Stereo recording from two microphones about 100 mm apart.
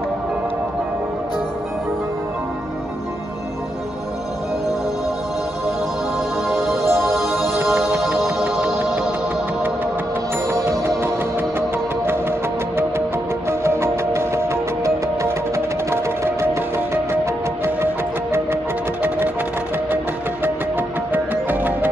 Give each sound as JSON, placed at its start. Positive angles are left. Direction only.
{"t": 6.5, "sound": "music", "side_deg": 0}
{"t": 6.8, "sound": "music", "side_deg": -25}
{"t": 7.8, "sound": "music", "side_deg": 0}
{"t": 10.5, "sound": "music", "side_deg": -30}
{"t": 12.1, "sound": "music", "side_deg": -25}
{"t": 19.0, "sound": "music", "side_deg": -20}
{"t": 21.1, "sound": "music", "side_deg": -20}